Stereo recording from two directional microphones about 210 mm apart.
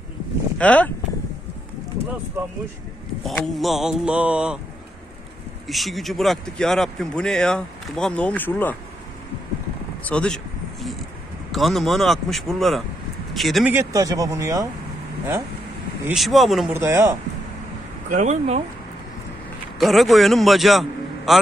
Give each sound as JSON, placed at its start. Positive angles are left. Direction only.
{"t": 0.6, "sound": "speech", "side_deg": 5}
{"t": 3.3, "sound": "speech", "side_deg": 0}
{"t": 5.7, "sound": "speech", "side_deg": 0}
{"t": 10.0, "sound": "a sound", "side_deg": 5}
{"t": 11.5, "sound": "speech", "side_deg": 0}
{"t": 16.1, "sound": "speech", "side_deg": 0}
{"t": 16.7, "sound": "speech", "side_deg": -10}
{"t": 18.1, "sound": "speech", "side_deg": -35}
{"t": 19.8, "sound": "a man's voice", "side_deg": 0}